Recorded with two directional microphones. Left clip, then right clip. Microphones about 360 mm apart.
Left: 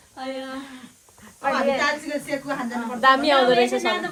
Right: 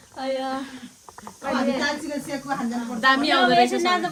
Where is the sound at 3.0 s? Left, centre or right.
Centre.